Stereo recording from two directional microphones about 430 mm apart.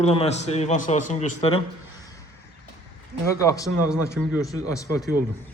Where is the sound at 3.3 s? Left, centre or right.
Centre.